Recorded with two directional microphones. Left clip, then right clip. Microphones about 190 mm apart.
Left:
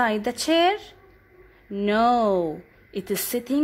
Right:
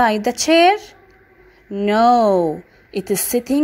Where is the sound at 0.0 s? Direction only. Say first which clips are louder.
Right 7 dB; 10° right (ahead or behind).